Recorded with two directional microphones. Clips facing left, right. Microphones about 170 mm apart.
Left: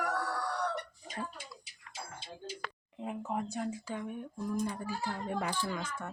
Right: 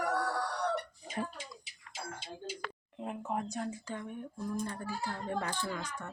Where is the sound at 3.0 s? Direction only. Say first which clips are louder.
Even; centre (ahead or behind).